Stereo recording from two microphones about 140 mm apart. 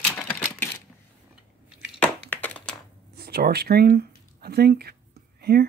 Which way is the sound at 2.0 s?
10° left (ahead or behind).